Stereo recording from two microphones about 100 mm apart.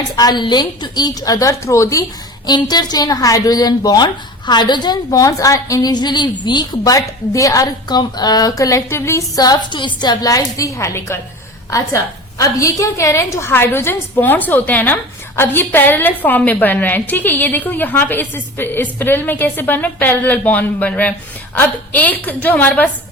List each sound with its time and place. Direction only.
0.2 s a woman's voice: 45° left (ahead or behind)
2.5 s a woman's voice: 45° left (ahead or behind); by 11.2 s 25° left (ahead or behind)
12.4 s a woman's voice: 35° left (ahead or behind); by 22.9 s 15° left (ahead or behind)